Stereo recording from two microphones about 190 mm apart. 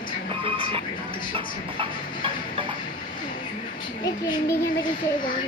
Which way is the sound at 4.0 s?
20° left (ahead or behind).